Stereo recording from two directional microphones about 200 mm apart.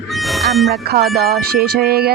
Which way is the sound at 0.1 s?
Centre (ahead or behind).